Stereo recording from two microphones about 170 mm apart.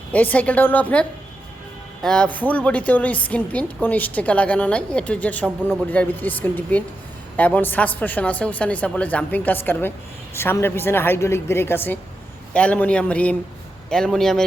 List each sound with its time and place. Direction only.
0.1 s a woman's voice: 10° left (ahead or behind)